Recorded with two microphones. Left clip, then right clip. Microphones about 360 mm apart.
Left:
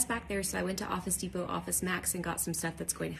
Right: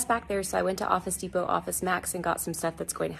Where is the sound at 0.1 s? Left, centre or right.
Centre.